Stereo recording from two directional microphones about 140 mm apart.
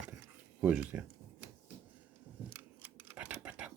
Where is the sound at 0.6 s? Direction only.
10° right (ahead or behind).